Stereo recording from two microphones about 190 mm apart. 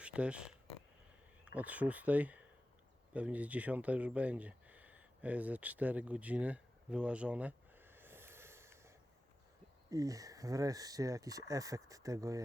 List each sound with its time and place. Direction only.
0.0 s speech: 5° right (ahead or behind)
9.9 s speech: 15° right (ahead or behind)